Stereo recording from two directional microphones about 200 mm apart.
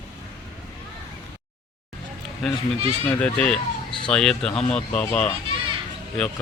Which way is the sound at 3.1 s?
10° left (ahead or behind).